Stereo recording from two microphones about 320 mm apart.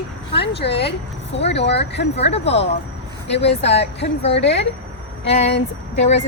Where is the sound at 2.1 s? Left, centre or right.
Centre.